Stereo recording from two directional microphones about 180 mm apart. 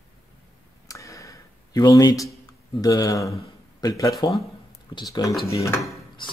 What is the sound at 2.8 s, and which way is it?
Speech, 20° left (ahead or behind).